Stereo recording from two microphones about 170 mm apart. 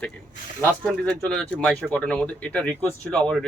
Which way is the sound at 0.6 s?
5° left (ahead or behind).